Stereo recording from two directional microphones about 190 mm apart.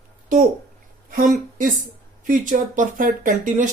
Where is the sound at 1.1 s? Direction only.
45° right (ahead or behind).